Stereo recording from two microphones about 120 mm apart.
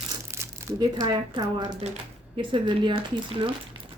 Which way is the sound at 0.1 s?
30° right (ahead or behind).